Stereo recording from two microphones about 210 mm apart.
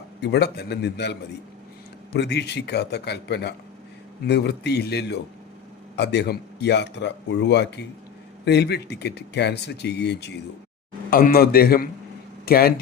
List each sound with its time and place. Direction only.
0.2 s speech: 55° left (ahead or behind)
2.1 s speech: 55° left (ahead or behind)
11.1 s speech: 45° left (ahead or behind)